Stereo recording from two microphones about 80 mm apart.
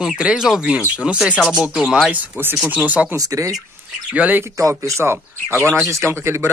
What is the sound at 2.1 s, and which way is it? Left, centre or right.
Speech, right.